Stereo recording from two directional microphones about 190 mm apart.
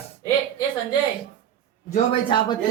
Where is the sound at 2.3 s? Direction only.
25° left (ahead or behind).